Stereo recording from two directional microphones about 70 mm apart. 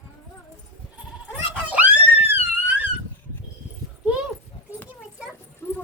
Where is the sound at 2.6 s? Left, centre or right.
Right.